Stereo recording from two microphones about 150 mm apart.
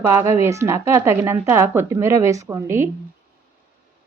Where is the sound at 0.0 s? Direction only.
15° right (ahead or behind).